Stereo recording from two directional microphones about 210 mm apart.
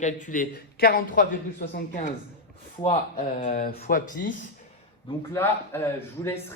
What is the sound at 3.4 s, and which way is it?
Speech, 40° left (ahead or behind).